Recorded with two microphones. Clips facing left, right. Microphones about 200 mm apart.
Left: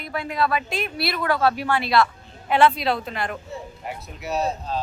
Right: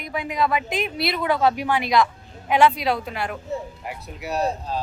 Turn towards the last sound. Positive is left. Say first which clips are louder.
# even
turn(degrees=-10)  # may be behind; listen again after turning